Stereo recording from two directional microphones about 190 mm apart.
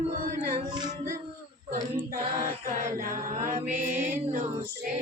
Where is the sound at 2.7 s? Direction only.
45° right (ahead or behind).